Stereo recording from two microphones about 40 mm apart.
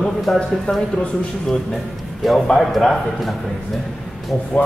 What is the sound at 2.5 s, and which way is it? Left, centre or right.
Speech, centre.